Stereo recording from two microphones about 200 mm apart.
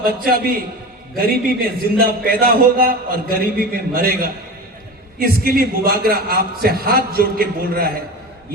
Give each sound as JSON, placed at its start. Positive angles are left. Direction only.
{"t": 0.0, "sound": "a man's voice", "side_deg": -45}